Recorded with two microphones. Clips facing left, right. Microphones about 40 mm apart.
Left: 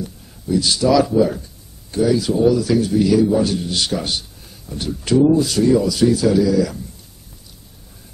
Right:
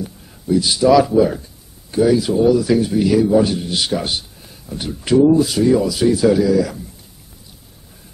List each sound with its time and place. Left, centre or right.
0.0 s speech: centre